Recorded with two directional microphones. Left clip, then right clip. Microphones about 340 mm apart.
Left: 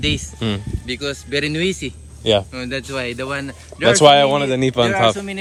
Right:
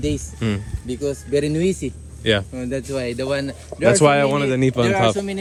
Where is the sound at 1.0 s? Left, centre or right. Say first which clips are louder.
Right 1 dB; centre.